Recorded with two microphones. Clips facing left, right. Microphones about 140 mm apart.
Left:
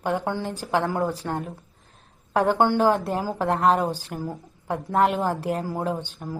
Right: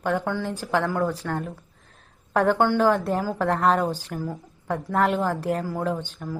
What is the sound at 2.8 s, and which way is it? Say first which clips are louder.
Speech: even; 30° left (ahead or behind).